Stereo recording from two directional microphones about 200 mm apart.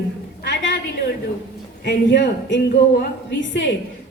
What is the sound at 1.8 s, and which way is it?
A woman's voice, 60° left (ahead or behind).